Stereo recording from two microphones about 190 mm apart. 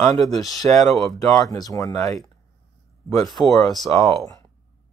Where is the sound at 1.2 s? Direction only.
15° left (ahead or behind).